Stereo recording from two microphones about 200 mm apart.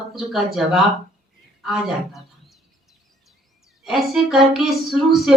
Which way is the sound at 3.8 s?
Centre (ahead or behind).